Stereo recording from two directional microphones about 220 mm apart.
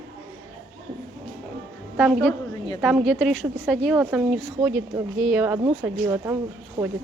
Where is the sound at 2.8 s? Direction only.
Centre (ahead or behind).